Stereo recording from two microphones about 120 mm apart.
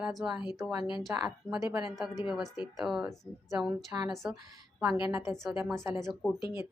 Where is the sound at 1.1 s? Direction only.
20° right (ahead or behind).